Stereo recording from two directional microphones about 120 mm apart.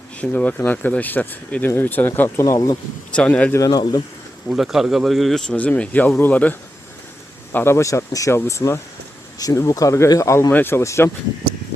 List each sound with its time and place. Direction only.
0.2 s speech: 10° left (ahead or behind); by 2.7 s 30° left (ahead or behind)
3.2 s speech: 10° left (ahead or behind)
3.6 s speech: 35° left (ahead or behind)
4.4 s speech: 5° right (ahead or behind); by 11.1 s 20° left (ahead or behind)